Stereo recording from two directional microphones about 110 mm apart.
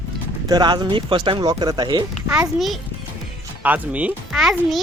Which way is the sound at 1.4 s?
35° right (ahead or behind).